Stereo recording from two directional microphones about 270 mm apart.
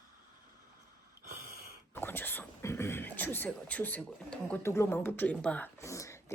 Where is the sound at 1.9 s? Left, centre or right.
Centre.